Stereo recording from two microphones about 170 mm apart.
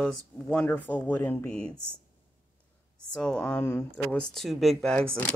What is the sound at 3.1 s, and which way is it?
Speech, 5° left (ahead or behind).